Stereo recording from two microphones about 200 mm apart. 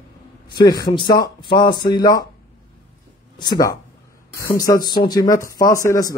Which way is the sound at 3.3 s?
20° left (ahead or behind).